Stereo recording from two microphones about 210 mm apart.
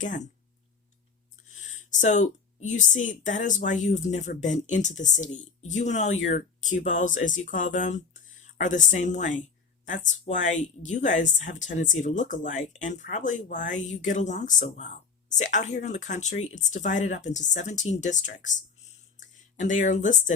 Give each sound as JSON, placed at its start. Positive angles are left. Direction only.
{"t": 0.0, "sound": "speech", "side_deg": 35}
{"t": 1.5, "sound": "speech", "side_deg": 35}